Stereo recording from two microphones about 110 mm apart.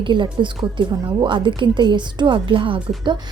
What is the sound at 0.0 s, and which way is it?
A woman's voice, 45° right (ahead or behind).